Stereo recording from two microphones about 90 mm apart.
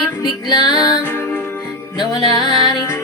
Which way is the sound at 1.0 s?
25° left (ahead or behind).